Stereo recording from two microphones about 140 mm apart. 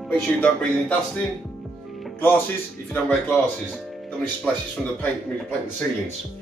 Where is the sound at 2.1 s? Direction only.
15° left (ahead or behind).